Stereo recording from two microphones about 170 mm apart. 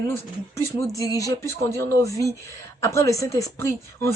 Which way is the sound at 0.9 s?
20° left (ahead or behind).